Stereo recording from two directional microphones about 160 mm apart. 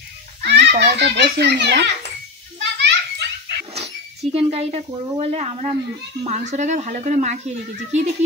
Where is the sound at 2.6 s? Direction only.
90° right.